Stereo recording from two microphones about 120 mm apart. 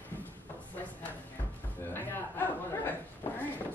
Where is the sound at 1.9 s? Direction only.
15° left (ahead or behind).